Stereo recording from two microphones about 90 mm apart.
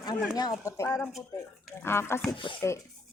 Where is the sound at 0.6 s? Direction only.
35° left (ahead or behind).